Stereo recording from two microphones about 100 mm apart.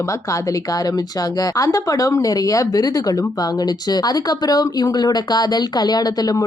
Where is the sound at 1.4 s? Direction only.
35° left (ahead or behind).